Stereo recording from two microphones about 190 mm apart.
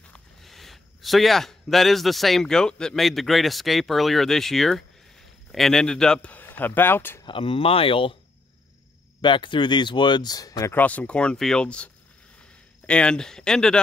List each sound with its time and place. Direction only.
0.0 s a man's voice: 5° left (ahead or behind)
7.2 s speech: 30° left (ahead or behind)
9.2 s speech: 25° left (ahead or behind); by 13.7 s 5° left (ahead or behind)